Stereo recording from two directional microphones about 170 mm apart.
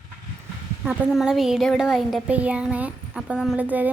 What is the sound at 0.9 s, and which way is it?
A woman's voice, 5° right (ahead or behind).